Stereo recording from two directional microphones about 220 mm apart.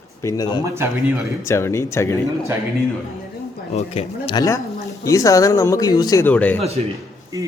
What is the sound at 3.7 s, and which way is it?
A man's voice, 25° left (ahead or behind).